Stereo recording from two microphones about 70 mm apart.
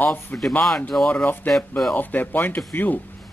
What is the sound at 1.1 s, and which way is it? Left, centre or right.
Speech, left.